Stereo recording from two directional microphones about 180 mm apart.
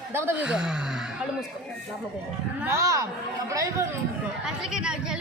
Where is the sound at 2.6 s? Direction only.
15° right (ahead or behind).